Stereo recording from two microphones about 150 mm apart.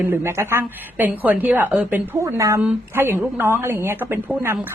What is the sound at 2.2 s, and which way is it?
A woman's voice, 20° right (ahead or behind).